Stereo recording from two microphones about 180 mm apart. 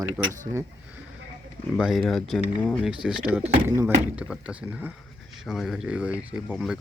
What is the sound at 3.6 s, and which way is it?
Speech, 15° right (ahead or behind).